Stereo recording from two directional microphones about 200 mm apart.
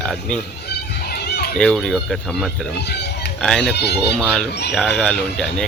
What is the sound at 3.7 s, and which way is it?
Speech, 55° left (ahead or behind).